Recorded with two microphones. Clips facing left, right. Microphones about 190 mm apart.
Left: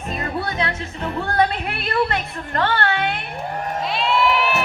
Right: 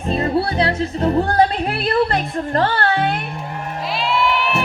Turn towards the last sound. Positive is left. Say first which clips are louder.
# even
turn(degrees=0)  # may be behind; listen again after turning